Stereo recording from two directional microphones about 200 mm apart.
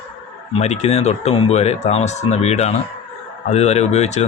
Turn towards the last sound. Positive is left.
turn(degrees=35)  # may be behind; listen again after turning